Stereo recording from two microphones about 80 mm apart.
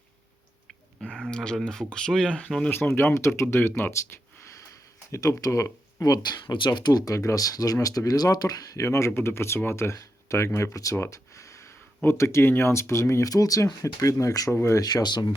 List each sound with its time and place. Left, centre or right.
1.3 s speech: centre
2.6 s speech: left
5.1 s speech: left
6.7 s speech: left
11.0 s a sound: left
12.0 s speech: left
14.8 s speech: left